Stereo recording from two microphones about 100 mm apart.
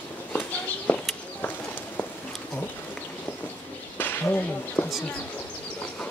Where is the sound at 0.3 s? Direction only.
15° left (ahead or behind).